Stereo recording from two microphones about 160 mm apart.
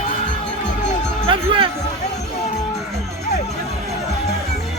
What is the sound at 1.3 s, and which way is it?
Speech, 35° right (ahead or behind).